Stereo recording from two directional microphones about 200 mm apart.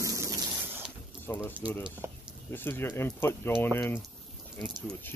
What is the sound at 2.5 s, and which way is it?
Speech, 10° left (ahead or behind).